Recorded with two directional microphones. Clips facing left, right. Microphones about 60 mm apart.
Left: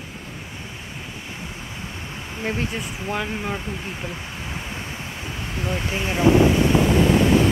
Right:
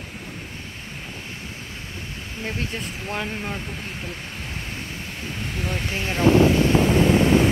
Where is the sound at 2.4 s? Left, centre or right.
Left.